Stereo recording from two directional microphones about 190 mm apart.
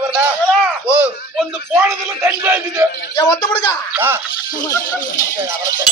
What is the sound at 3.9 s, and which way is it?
Speech, 10° right (ahead or behind).